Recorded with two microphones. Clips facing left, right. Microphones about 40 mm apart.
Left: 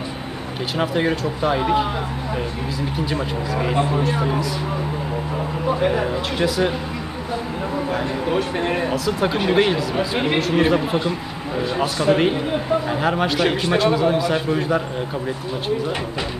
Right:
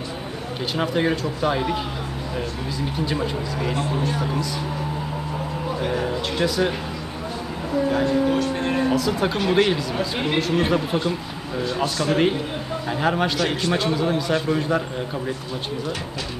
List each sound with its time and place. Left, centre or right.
0.7 s a man's voice: centre
3.5 s speech: left
5.7 s speech: left
6.3 s speech: centre
8.0 s speech: left
8.9 s speech: centre
9.4 s a man's voice: centre
12.8 s a man's voice: centre